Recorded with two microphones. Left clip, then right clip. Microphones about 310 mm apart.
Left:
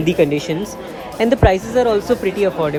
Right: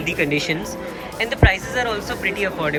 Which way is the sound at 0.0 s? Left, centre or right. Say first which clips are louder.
Left 5 dB; centre.